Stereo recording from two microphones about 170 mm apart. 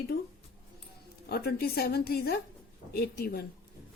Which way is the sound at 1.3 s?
65° left (ahead or behind).